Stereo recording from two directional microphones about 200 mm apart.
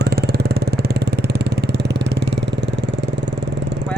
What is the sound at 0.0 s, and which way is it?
Vehicle, 55° right (ahead or behind).